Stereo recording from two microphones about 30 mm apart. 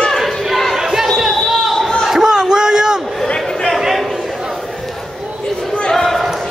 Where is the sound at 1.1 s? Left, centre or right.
Centre.